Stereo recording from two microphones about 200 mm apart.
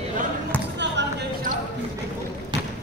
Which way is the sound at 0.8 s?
60° right (ahead or behind).